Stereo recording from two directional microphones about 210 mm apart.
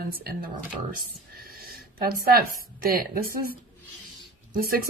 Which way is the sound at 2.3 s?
40° right (ahead or behind).